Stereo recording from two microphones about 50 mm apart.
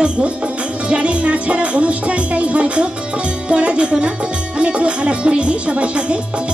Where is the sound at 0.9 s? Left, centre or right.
Right.